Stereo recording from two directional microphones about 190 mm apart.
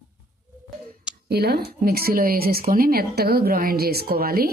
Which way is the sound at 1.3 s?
55° right (ahead or behind).